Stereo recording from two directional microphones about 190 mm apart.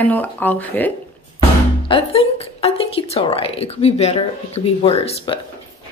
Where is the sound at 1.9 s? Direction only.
30° left (ahead or behind).